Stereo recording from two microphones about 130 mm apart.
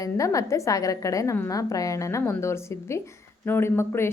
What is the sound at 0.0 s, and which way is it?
Speech, 25° left (ahead or behind).